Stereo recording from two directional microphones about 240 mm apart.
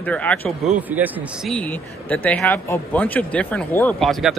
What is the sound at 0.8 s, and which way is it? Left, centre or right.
Speech, centre.